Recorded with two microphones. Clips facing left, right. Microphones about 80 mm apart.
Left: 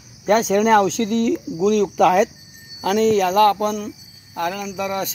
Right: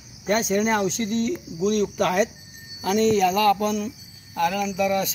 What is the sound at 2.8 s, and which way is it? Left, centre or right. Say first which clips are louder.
Speech: left 3 dB; left.